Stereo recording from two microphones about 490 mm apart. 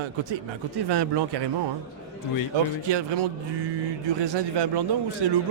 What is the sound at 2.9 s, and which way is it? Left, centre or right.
Speech, right.